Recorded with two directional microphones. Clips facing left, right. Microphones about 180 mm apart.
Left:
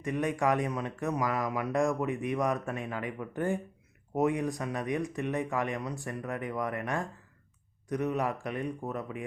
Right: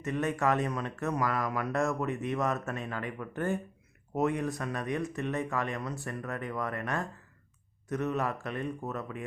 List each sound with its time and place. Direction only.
0.0 s speech: 15° left (ahead or behind)